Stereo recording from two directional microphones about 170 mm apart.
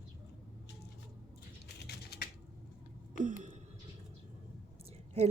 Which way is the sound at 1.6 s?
70° left (ahead or behind).